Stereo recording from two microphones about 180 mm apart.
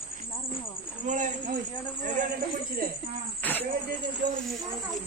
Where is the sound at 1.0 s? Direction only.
45° right (ahead or behind).